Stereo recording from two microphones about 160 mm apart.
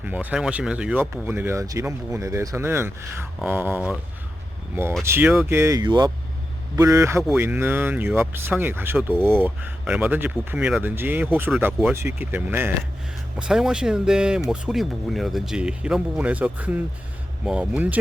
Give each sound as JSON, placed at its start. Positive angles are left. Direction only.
{"t": 0.0, "sound": "speech", "side_deg": -10}